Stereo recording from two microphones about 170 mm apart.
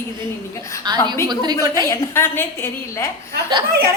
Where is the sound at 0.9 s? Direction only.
25° right (ahead or behind).